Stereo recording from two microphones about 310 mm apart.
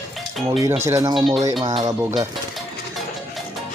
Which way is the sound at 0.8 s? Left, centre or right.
Centre.